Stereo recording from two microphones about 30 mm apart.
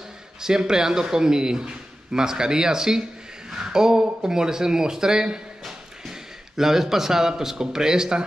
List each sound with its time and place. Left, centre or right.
0.4 s a man's voice: right